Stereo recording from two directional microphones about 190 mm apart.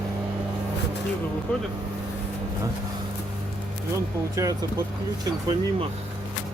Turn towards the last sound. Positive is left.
turn(degrees=-20)  # may be behind; listen again after turning